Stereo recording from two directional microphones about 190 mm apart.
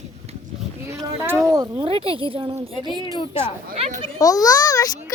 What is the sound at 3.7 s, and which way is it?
Speech, 30° right (ahead or behind).